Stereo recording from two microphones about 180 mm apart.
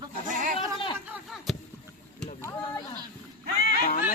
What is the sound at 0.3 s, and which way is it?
Goat, 45° right (ahead or behind).